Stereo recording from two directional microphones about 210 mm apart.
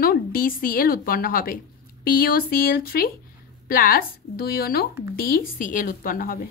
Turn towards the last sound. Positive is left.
turn(degrees=45)  # may be behind; listen again after turning